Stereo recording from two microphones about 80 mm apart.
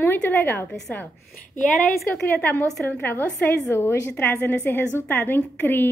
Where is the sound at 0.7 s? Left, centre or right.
Centre.